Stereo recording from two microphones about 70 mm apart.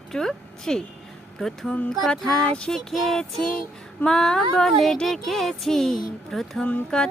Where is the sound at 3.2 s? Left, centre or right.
Centre.